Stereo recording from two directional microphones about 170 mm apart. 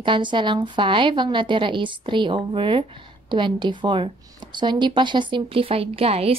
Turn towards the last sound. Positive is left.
turn(degrees=-35)  # may be behind; listen again after turning